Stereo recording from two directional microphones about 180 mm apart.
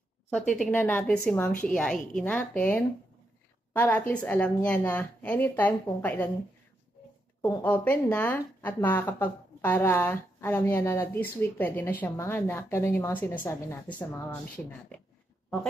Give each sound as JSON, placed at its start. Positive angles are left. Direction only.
{"t": 0.3, "sound": "speech", "side_deg": 5}
{"t": 7.6, "sound": "speech", "side_deg": 10}